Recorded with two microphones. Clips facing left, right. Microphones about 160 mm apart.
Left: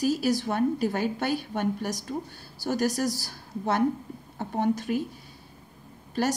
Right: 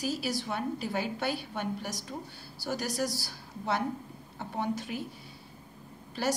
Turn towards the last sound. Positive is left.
turn(degrees=45)  # may be behind; listen again after turning